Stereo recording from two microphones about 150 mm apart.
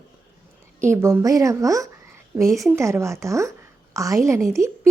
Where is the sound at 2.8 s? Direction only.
20° right (ahead or behind).